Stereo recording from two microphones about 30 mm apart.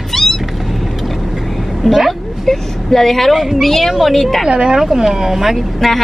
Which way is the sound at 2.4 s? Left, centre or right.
Centre.